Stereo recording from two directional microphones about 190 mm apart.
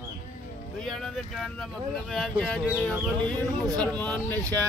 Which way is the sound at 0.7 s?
Centre (ahead or behind).